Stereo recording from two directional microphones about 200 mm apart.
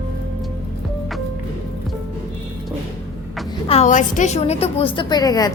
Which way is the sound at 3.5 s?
30° left (ahead or behind).